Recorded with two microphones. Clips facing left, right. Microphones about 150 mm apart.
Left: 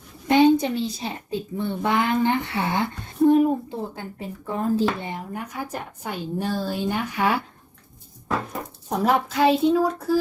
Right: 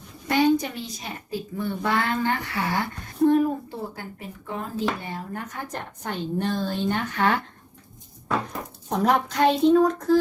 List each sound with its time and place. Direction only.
0.3 s a woman's voice: 25° left (ahead or behind)
4.4 s speech: 35° left (ahead or behind)
5.0 s a woman's voice: 15° left (ahead or behind)
8.9 s a woman's voice: 5° left (ahead or behind)